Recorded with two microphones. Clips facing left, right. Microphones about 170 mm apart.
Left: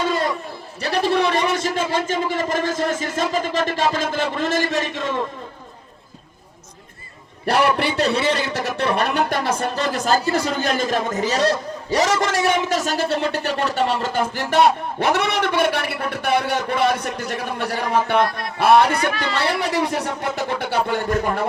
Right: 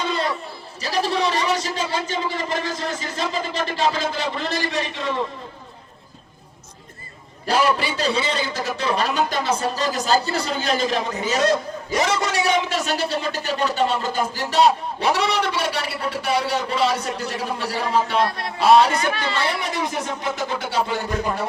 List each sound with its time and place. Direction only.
0.0 s a sound: 45° left (ahead or behind)
0.8 s a man's voice: 60° left (ahead or behind)
7.4 s a man's voice: 65° left (ahead or behind)
18.3 s speech: 25° right (ahead or behind)
19.2 s a man's voice: 70° left (ahead or behind)